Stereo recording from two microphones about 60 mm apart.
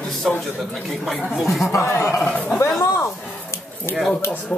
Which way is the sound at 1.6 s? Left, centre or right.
Left.